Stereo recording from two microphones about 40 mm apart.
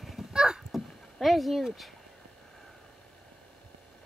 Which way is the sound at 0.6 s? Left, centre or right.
Centre.